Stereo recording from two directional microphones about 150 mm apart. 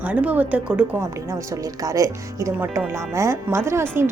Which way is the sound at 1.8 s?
20° right (ahead or behind).